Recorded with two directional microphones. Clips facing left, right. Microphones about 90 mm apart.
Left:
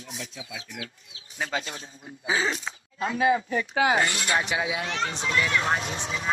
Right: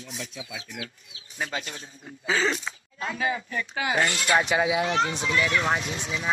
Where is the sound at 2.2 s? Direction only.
15° left (ahead or behind).